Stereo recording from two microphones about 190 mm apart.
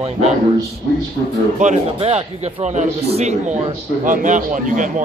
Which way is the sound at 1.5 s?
35° right (ahead or behind).